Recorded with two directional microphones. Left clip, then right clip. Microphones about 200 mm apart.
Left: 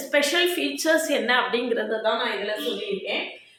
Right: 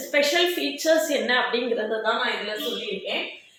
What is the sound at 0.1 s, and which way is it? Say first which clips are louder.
A woman's voice: even; 20° left (ahead or behind).